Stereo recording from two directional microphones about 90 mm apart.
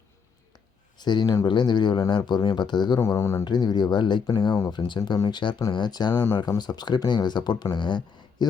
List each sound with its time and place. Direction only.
0.5 s a sound: 55° left (ahead or behind)
1.5 s speech: 55° left (ahead or behind)
3.0 s speech: 30° left (ahead or behind)
3.4 s speech: 50° left (ahead or behind)